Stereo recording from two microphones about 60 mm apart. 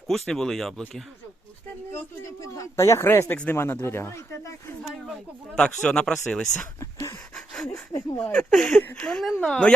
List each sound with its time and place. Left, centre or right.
0.1 s speech: centre
2.2 s speech: left
5.5 s speech: centre
6.7 s a sound: left
7.3 s a sound: centre
8.2 s speech: left
8.4 s speech: centre